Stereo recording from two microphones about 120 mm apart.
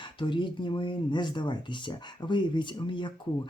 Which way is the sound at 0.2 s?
40° left (ahead or behind).